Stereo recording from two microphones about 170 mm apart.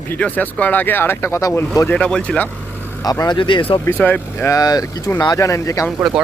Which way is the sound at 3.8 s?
10° left (ahead or behind).